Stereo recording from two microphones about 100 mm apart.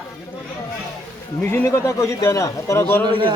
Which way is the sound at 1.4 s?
20° left (ahead or behind).